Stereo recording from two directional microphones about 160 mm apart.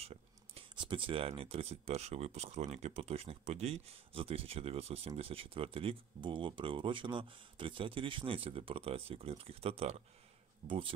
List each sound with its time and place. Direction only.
0.0 s speech: 40° right (ahead or behind)